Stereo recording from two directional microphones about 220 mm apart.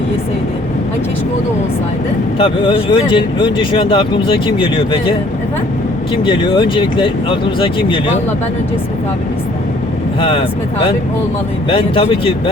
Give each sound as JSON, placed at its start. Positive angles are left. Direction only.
{"t": 2.4, "sound": "speech", "side_deg": 20}
{"t": 6.2, "sound": "speech", "side_deg": 20}
{"t": 10.2, "sound": "speech", "side_deg": 25}
{"t": 11.7, "sound": "speech", "side_deg": 25}